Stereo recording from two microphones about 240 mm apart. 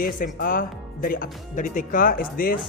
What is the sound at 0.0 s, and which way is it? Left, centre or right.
Speech, left.